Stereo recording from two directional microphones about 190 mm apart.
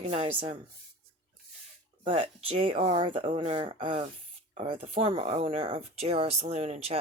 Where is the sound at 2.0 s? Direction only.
30° right (ahead or behind).